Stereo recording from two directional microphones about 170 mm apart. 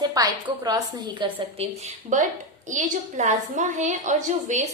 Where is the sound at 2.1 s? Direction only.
50° right (ahead or behind).